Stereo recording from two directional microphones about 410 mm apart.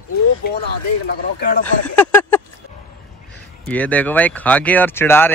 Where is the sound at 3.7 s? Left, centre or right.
Centre.